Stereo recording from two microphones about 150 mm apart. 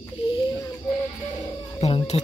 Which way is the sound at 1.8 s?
45° left (ahead or behind).